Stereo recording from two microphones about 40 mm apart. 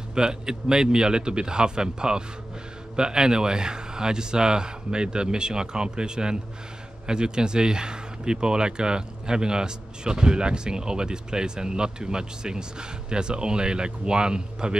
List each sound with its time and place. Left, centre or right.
0.1 s speech: centre